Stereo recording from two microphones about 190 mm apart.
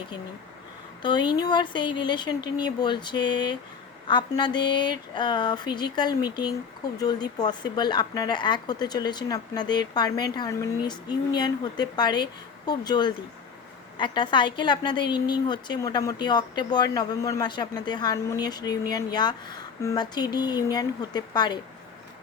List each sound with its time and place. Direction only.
1.0 s a woman's voice: 25° left (ahead or behind)